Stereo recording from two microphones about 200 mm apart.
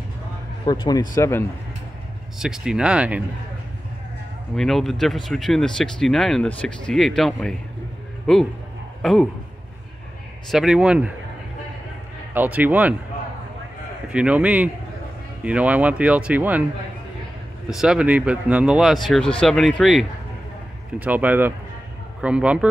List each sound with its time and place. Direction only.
0.7 s speech: 20° left (ahead or behind)
2.3 s speech: 5° right (ahead or behind)
4.6 s speech: centre (ahead or behind)
10.5 s speech: 5° right (ahead or behind)
12.4 s speech: 10° right (ahead or behind)
14.0 s speech: 5° right (ahead or behind)
17.6 s speech: 5° right (ahead or behind)